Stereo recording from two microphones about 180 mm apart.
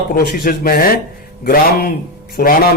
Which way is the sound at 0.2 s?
55° left (ahead or behind).